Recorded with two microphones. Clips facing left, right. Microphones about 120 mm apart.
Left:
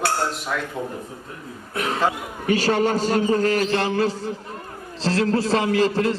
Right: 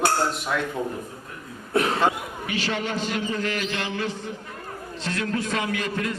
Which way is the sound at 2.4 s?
40° left (ahead or behind).